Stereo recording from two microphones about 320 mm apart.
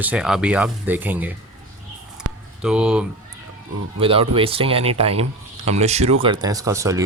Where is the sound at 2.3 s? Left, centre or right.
Right.